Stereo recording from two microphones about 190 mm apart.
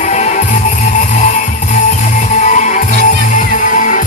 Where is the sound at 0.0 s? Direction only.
40° left (ahead or behind).